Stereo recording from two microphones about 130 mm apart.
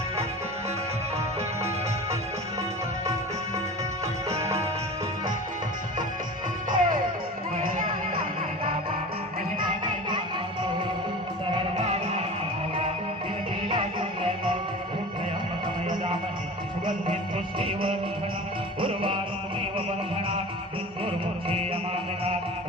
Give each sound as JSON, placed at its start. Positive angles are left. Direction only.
{"t": 4.3, "sound": "music", "side_deg": -20}
{"t": 6.7, "sound": "music", "side_deg": -90}
{"t": 11.8, "sound": "music", "side_deg": -55}
{"t": 13.7, "sound": "music", "side_deg": -45}
{"t": 17.6, "sound": "music", "side_deg": -45}